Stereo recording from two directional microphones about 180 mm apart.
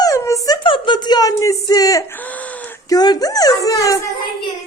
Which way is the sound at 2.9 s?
20° left (ahead or behind).